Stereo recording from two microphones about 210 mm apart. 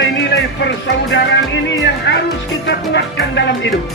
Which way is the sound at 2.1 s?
60° left (ahead or behind).